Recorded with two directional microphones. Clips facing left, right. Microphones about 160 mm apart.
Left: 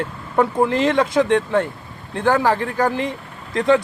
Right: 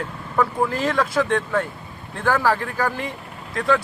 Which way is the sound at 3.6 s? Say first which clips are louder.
Left 5 dB; 20° left (ahead or behind).